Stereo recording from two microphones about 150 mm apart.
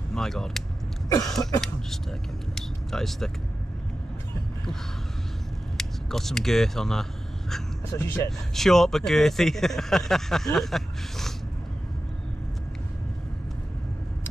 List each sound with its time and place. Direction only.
0.1 s speech: 5° left (ahead or behind)
2.5 s speech: centre (ahead or behind)
5.8 s speech: centre (ahead or behind)